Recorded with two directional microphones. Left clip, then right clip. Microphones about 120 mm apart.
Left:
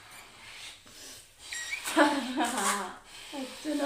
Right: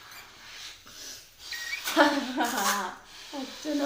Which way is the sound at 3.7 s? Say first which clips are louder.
Right 2 dB; 25° right (ahead or behind).